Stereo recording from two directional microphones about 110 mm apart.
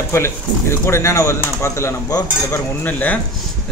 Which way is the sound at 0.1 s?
25° left (ahead or behind).